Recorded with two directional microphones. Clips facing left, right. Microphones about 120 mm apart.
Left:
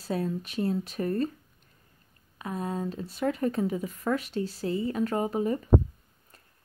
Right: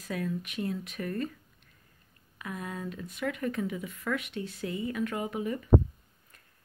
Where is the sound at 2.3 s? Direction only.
30° left (ahead or behind).